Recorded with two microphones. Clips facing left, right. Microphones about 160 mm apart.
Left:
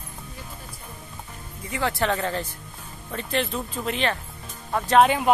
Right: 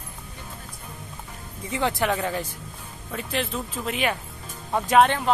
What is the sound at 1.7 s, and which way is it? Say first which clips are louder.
A man's voice: right 1 dB; 20° right (ahead or behind).